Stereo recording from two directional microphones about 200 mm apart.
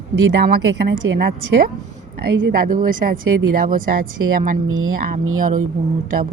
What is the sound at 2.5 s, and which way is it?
Speech, 45° right (ahead or behind).